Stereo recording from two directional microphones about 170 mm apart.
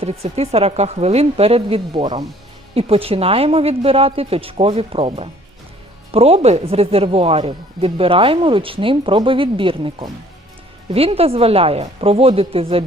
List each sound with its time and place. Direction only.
0.0 s speech: 35° right (ahead or behind)